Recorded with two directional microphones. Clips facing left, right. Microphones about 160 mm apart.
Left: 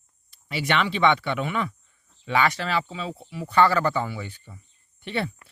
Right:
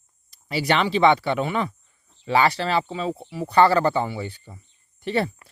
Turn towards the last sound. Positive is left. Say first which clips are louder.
# right 5 dB
turn(degrees=-40)  # may be behind; listen again after turning